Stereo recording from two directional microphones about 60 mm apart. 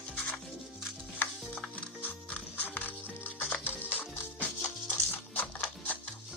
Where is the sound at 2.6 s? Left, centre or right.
Left.